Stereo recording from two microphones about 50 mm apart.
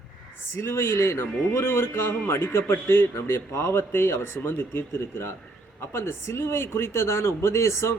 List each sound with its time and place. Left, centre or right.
0.5 s a man's voice: left
3.5 s speech: left
3.9 s a man's voice: left